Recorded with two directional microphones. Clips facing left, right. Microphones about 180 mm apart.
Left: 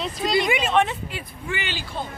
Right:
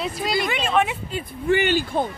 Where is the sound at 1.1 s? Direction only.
50° right (ahead or behind).